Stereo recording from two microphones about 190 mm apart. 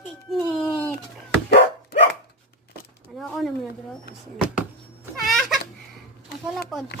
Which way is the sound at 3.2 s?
Centre (ahead or behind).